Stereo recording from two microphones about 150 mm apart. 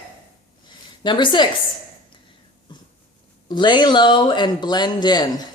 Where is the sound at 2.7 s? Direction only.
30° left (ahead or behind).